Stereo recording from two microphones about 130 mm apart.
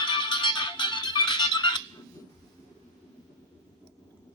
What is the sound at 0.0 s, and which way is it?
Music, 40° left (ahead or behind).